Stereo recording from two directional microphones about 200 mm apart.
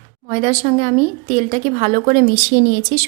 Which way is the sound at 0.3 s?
35° right (ahead or behind).